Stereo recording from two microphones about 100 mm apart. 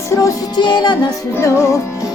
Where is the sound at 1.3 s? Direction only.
30° left (ahead or behind).